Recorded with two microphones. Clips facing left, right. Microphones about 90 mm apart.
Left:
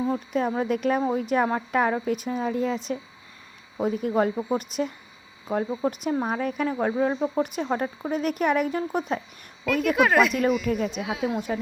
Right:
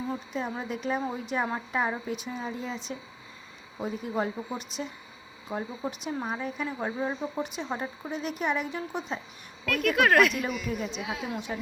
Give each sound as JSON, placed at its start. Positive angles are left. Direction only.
{"t": 0.1, "sound": "speech", "side_deg": 50}
{"t": 9.6, "sound": "speech", "side_deg": 0}